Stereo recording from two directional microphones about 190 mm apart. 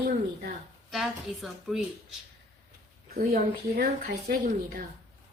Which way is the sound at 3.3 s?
55° right (ahead or behind).